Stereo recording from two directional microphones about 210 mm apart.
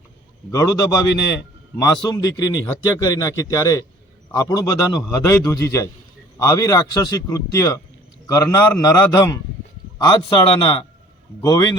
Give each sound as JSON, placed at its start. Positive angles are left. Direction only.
{"t": 0.5, "sound": "a man's voice", "side_deg": 15}